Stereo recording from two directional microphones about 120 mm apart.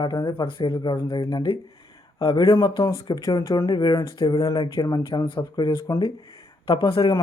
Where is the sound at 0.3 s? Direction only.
45° left (ahead or behind).